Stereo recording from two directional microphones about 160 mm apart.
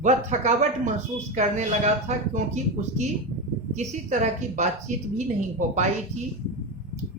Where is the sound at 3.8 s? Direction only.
45° right (ahead or behind).